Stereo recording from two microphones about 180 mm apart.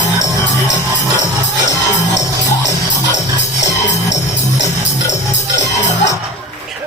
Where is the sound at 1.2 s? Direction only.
85° left.